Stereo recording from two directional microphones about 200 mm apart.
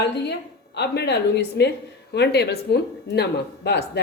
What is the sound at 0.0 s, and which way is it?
A woman's voice, 55° left (ahead or behind).